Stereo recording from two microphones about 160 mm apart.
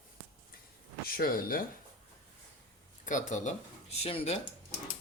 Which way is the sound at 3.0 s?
50° left (ahead or behind).